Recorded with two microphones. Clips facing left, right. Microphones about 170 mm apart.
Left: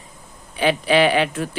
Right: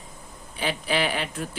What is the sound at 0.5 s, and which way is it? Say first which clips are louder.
Speech: left 9 dB; 75° left (ahead or behind).